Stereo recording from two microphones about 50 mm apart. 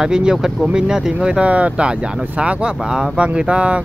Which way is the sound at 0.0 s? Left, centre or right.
Centre.